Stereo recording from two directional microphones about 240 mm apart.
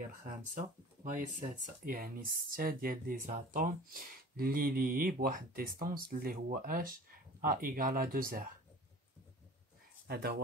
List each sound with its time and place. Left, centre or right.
0.2 s speech: right
10.0 s speech: right